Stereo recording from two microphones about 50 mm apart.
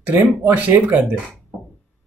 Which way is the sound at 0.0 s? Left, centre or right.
Right.